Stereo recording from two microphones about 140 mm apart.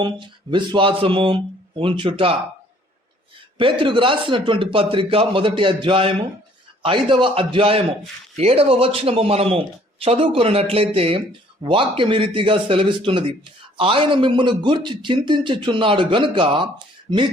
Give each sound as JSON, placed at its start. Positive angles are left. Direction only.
{"t": 0.0, "sound": "a man's voice", "side_deg": -35}
{"t": 3.6, "sound": "a man's voice", "side_deg": -40}